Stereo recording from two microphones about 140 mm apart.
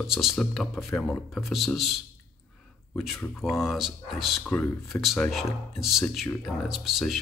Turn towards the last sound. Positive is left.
turn(degrees=0)  # may be behind; listen again after turning